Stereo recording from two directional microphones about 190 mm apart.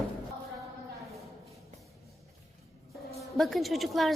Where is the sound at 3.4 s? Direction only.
Centre (ahead or behind).